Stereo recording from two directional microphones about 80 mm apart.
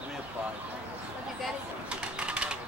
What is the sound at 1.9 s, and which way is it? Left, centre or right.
Typing, centre.